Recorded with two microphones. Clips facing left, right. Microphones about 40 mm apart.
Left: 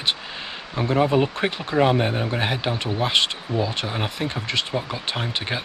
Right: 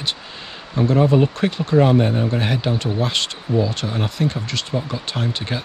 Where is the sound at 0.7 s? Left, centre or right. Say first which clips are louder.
Right 4 dB; centre.